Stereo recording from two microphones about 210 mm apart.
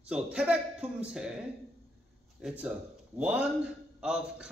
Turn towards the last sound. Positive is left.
turn(degrees=-5)  # may be behind; listen again after turning